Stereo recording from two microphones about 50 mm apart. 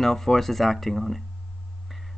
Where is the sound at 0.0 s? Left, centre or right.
Centre.